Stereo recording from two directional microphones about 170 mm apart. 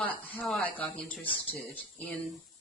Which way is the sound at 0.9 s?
35° left (ahead or behind).